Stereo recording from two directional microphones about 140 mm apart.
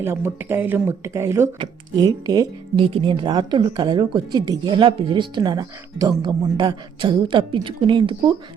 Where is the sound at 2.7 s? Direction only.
40° right (ahead or behind).